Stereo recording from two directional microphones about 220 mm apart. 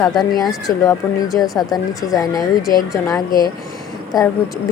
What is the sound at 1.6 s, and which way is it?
Speech, 15° left (ahead or behind).